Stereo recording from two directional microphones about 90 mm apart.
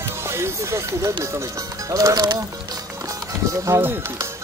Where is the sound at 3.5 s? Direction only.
30° right (ahead or behind).